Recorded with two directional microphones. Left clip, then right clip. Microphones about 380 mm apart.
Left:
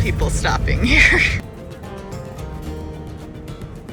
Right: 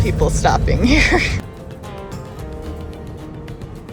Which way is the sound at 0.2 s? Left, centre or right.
Centre.